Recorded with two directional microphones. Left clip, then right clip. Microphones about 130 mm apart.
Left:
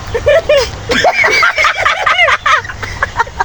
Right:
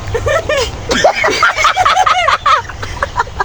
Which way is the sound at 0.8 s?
35° right (ahead or behind).